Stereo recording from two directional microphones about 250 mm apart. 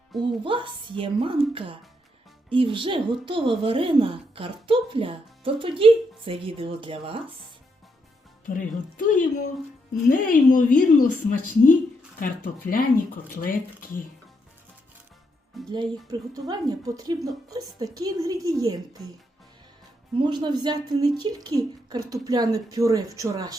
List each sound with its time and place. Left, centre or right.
0.2 s a woman's voice: centre
8.4 s a woman's voice: left
15.6 s speech: centre
16.3 s speech: centre
20.1 s speech: centre